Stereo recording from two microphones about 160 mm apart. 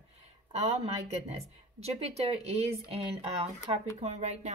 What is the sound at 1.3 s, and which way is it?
A woman's voice, 40° right (ahead or behind).